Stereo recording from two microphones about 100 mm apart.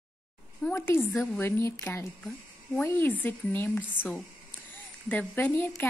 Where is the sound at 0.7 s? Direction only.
25° left (ahead or behind).